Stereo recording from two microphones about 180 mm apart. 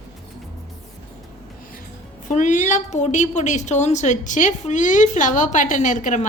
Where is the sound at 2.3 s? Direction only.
45° left (ahead or behind).